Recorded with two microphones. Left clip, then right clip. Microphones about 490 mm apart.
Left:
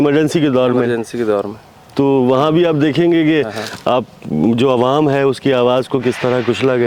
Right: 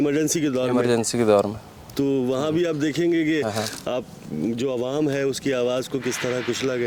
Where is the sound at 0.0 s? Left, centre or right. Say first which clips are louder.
Left 9 dB; left.